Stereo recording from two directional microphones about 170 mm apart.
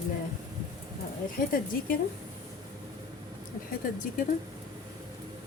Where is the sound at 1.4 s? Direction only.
55° left (ahead or behind).